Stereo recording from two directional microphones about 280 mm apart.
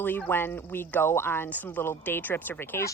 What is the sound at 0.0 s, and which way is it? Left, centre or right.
Turkey, centre.